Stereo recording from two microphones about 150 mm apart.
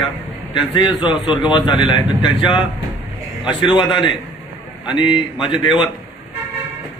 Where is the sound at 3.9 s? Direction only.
30° left (ahead or behind).